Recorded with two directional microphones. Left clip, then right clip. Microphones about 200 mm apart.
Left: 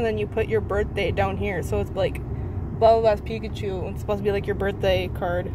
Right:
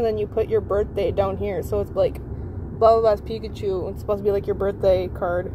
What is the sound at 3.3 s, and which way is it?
Speech, 20° right (ahead or behind).